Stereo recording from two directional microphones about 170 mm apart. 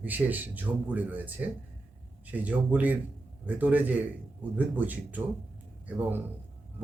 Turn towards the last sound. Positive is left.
turn(degrees=-10)  # may be behind; listen again after turning